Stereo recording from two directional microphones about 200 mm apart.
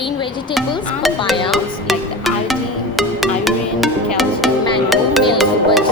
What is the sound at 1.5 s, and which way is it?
Music, centre (ahead or behind).